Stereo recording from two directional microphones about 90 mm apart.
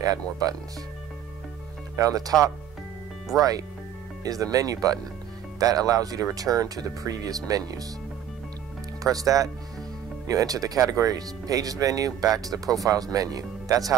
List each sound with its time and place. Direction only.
0.0 s speech: 40° right (ahead or behind)
2.0 s speech: 40° right (ahead or behind)
3.3 s speech: 40° right (ahead or behind)
9.0 s speech: 40° right (ahead or behind)